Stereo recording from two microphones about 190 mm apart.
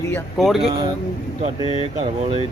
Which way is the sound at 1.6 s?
25° left (ahead or behind).